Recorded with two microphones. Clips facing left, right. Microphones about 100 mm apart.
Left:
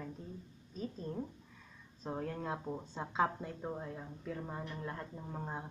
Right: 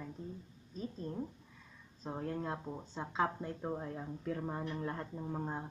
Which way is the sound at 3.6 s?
10° right (ahead or behind).